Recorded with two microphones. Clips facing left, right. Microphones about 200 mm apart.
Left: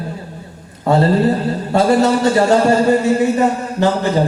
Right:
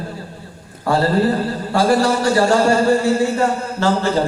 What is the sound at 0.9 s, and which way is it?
Speech, 20° left (ahead or behind).